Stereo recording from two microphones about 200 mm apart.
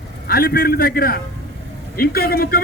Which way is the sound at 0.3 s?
50° left (ahead or behind).